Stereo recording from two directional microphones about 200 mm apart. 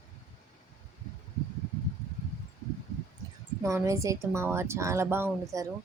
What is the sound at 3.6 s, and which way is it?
Speech, 15° right (ahead or behind).